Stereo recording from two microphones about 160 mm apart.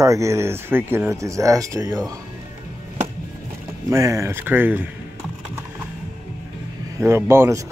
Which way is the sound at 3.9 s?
20° right (ahead or behind).